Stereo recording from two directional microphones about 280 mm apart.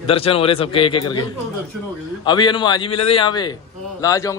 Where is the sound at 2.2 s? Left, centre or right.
Centre.